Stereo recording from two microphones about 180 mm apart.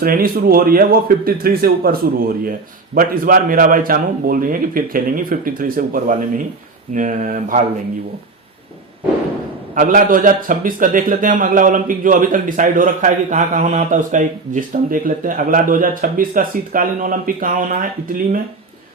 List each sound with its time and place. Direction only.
0.0 s a man's voice: 55° right (ahead or behind)
9.7 s a man's voice: 50° right (ahead or behind)